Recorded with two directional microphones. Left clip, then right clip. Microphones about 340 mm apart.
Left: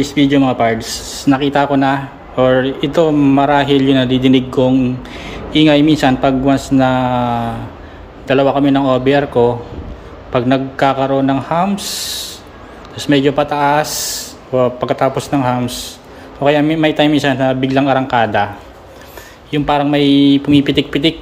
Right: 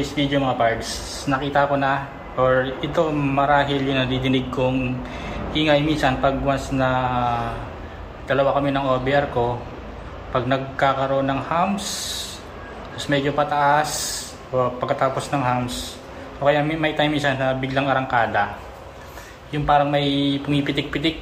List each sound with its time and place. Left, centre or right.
0.0 s speech: left
19.5 s speech: left